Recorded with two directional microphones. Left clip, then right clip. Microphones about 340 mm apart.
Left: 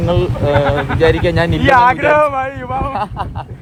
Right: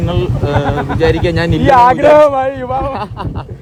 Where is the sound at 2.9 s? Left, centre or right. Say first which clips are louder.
Left 2 dB; centre.